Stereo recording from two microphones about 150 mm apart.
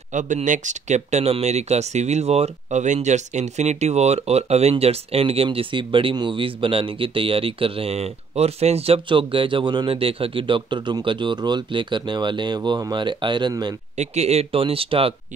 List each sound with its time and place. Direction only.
0.1 s speech: 55° right (ahead or behind); by 13.7 s 30° right (ahead or behind)
13.9 s speech: 45° right (ahead or behind)